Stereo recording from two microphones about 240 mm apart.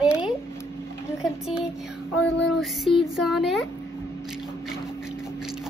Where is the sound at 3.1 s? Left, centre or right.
Centre.